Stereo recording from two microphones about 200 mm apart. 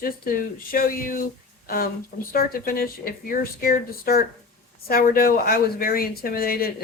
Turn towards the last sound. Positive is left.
turn(degrees=50)  # may be behind; listen again after turning